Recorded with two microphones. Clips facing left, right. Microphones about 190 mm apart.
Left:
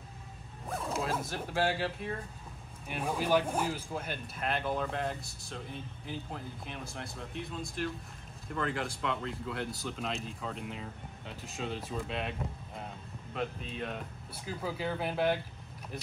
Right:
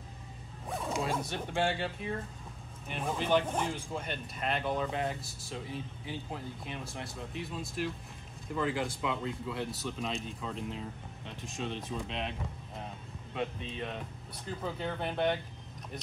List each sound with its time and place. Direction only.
0.7 s speech: centre (ahead or behind)